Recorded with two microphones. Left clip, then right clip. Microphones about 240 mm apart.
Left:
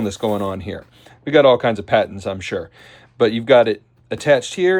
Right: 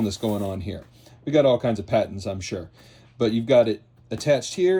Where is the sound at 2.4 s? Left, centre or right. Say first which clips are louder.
Left 8 dB; centre.